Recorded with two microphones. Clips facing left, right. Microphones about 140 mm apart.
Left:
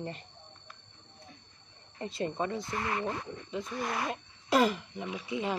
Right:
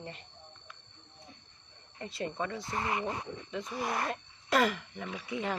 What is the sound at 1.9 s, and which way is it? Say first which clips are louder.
Speech: left 3 dB; 25° left (ahead or behind).